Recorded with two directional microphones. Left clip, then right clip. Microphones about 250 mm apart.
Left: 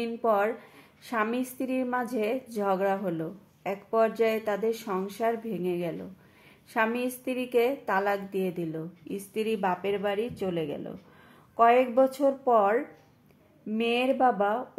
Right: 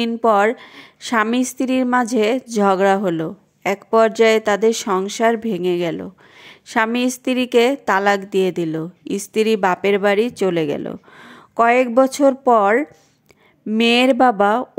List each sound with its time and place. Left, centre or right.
0.0 s a woman's voice: right